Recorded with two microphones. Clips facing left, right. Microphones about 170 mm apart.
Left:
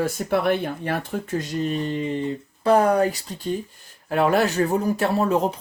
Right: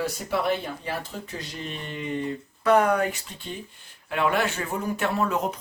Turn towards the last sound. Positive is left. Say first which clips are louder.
# left 5 dB
turn(degrees=30)  # may be behind; listen again after turning